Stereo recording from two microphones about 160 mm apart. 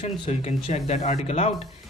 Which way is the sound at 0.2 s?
40° left (ahead or behind).